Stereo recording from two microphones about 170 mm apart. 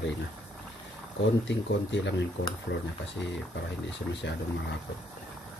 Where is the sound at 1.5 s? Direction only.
90° left.